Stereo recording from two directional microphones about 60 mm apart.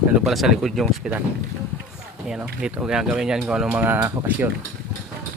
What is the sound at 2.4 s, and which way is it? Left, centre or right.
Speech, right.